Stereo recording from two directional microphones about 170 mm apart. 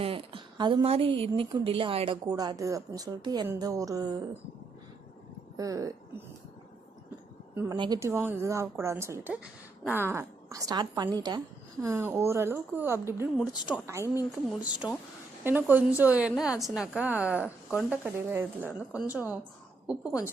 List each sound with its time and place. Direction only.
0.0 s speech: 30° right (ahead or behind)
5.5 s speech: 20° right (ahead or behind)
7.5 s a woman's voice: 15° right (ahead or behind)